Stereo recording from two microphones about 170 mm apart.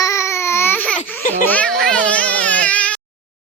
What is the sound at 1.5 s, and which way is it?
Baby cry, 5° left (ahead or behind).